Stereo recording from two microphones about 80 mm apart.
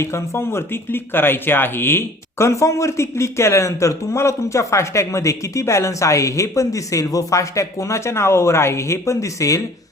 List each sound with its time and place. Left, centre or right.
0.0 s speech: left